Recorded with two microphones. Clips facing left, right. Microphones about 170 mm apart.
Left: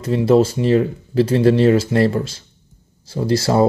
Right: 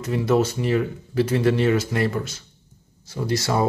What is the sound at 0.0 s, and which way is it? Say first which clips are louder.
Speech: left 6 dB; 30° left (ahead or behind).